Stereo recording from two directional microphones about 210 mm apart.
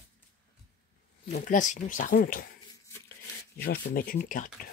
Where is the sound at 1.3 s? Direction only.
35° left (ahead or behind).